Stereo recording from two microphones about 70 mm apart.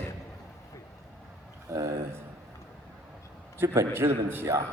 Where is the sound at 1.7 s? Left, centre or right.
Right.